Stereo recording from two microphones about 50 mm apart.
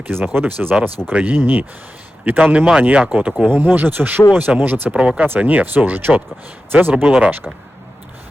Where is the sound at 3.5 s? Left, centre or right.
Right.